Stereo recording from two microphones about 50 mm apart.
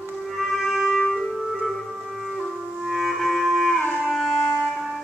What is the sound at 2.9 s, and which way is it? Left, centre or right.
Music, centre.